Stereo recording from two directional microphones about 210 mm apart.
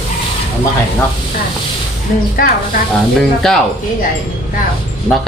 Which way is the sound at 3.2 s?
Centre (ahead or behind).